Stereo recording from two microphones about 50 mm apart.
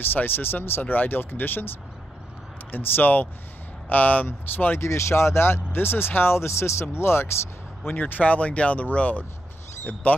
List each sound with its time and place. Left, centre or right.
0.0 s speech: left
2.7 s speech: left
4.7 s speech: left
7.8 s speech: left